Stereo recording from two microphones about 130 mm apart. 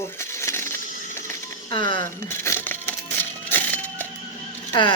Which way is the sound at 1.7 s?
35° left (ahead or behind).